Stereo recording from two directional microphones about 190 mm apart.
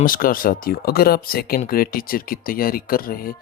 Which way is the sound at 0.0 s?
50° left (ahead or behind).